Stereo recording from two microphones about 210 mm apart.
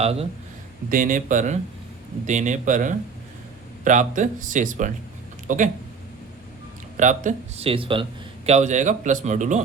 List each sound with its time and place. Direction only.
0.0 s speech: 30° right (ahead or behind)
0.9 s speech: 40° right (ahead or behind)
6.9 s speech: 35° right (ahead or behind)